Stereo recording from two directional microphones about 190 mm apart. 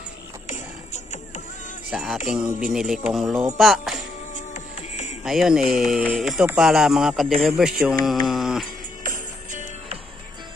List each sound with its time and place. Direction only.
0.5 s music: 40° left (ahead or behind)
1.9 s music: centre (ahead or behind)
4.6 s music: 40° left (ahead or behind)
5.2 s music: centre (ahead or behind)
8.0 s mantra: centre (ahead or behind)
9.0 s music: 45° right (ahead or behind)